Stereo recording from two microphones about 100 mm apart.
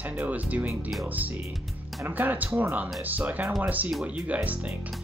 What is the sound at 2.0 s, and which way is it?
Speech, 15° right (ahead or behind).